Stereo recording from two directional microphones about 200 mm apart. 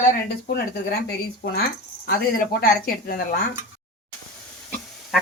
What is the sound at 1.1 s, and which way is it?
Speech, 50° left (ahead or behind).